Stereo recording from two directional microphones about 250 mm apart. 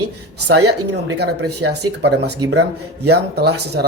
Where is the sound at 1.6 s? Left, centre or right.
Right.